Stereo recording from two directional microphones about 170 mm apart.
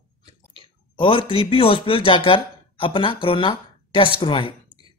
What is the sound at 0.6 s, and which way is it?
A woman's voice, 30° left (ahead or behind).